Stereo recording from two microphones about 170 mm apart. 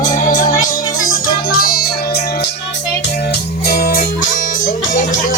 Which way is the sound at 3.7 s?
65° left (ahead or behind).